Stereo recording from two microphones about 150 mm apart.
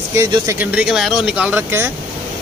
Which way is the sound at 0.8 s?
5° right (ahead or behind).